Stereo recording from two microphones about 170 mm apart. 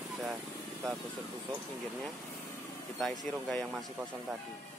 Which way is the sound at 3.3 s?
5° left (ahead or behind).